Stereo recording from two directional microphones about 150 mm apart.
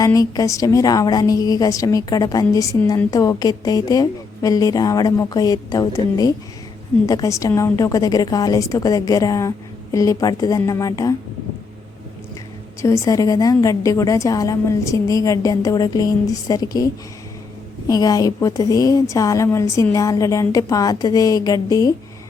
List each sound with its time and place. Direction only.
0.0 s a woman's voice: 25° left (ahead or behind)
12.8 s a woman's voice: 20° left (ahead or behind)
17.8 s a woman's voice: 25° left (ahead or behind)